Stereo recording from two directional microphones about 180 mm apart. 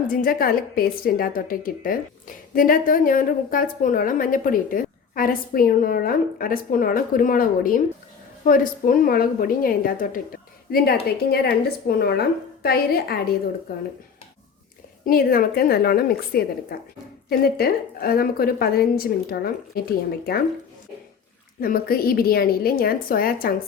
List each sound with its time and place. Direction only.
0.1 s a woman's voice: 55° left (ahead or behind)
15.0 s a woman's voice: 55° left (ahead or behind)
21.6 s a woman's voice: 55° left (ahead or behind)